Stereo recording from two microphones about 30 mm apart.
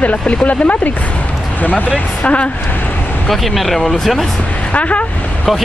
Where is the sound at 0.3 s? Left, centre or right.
Left.